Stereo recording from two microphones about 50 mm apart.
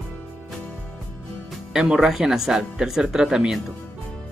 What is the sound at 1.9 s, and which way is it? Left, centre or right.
Speech, centre.